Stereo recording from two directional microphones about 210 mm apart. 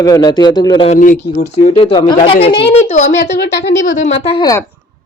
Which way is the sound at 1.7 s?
25° left (ahead or behind).